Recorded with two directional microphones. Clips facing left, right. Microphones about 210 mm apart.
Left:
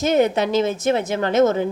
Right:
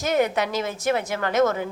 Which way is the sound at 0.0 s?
25° left (ahead or behind).